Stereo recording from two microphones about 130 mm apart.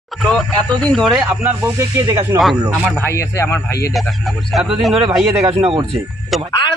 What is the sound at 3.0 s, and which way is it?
Speech, 20° left (ahead or behind).